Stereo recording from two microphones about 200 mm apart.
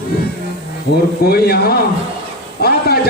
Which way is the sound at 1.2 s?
50° left (ahead or behind).